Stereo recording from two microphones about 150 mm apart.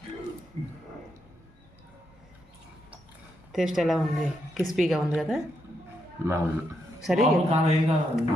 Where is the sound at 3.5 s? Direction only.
Centre (ahead or behind).